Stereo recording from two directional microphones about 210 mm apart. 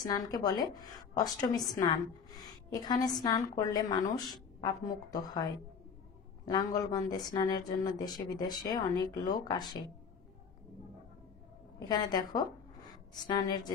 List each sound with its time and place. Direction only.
0.0 s a man's voice: 20° left (ahead or behind)
11.9 s a woman's voice: 20° left (ahead or behind)